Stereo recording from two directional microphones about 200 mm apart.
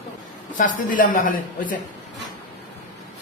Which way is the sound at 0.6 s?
40° left (ahead or behind).